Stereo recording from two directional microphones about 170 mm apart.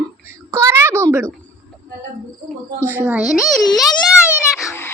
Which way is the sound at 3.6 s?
25° left (ahead or behind).